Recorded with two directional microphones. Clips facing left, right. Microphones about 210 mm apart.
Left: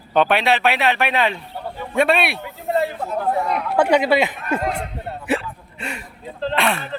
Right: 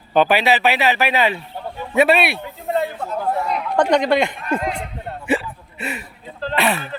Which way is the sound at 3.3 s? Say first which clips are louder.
Even; 5° left (ahead or behind).